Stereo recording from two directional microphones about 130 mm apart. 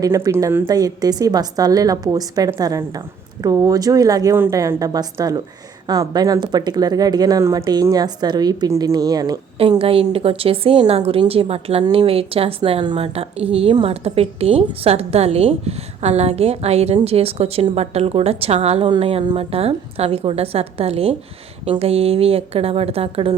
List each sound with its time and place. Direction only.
0.0 s speech: 25° right (ahead or behind)
0.7 s speech: 30° right (ahead or behind)
9.6 s a woman's voice: 50° right (ahead or behind)